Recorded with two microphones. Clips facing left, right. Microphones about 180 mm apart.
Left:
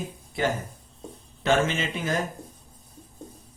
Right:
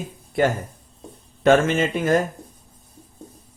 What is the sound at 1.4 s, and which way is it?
Speech, 55° right (ahead or behind).